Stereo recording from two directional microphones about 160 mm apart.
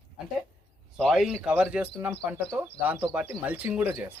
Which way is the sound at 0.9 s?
Centre (ahead or behind).